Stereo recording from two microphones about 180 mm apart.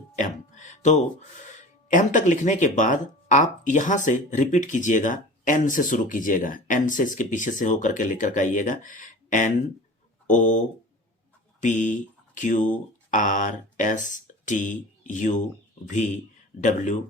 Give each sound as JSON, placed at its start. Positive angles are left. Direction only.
{"t": 0.2, "sound": "a sound", "side_deg": 40}
{"t": 1.9, "sound": "speech", "side_deg": 45}
{"t": 11.6, "sound": "speech", "side_deg": 45}
{"t": 16.6, "sound": "speech", "side_deg": 45}